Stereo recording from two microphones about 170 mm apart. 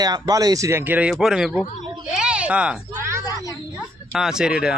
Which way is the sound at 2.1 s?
5° right (ahead or behind).